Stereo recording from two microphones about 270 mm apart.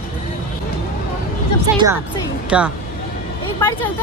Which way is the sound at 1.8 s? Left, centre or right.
Centre.